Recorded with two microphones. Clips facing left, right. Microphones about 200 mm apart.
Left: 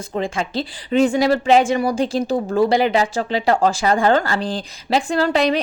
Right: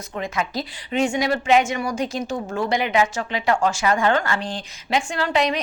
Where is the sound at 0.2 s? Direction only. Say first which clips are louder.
Left 3 dB; 30° left (ahead or behind).